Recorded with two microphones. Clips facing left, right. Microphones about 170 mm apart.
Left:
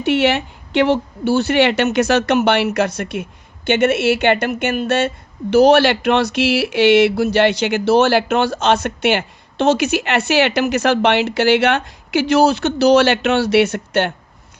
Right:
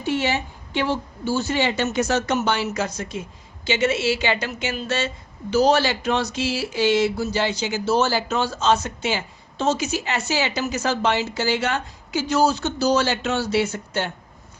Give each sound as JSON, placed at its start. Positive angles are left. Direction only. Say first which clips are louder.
{"t": 0.0, "sound": "a woman's voice", "louder": "left 7 dB", "side_deg": 70}